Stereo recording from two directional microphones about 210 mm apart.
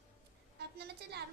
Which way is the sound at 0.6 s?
50° right (ahead or behind).